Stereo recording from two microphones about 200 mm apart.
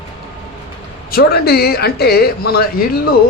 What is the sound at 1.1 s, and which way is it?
Speech, 50° left (ahead or behind).